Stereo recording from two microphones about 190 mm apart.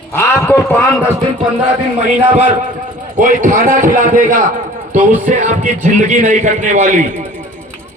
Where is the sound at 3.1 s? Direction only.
45° right (ahead or behind).